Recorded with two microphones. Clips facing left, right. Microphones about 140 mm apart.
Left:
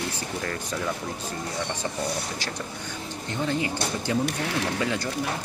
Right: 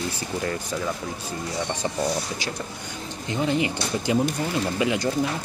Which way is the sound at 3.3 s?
15° right (ahead or behind).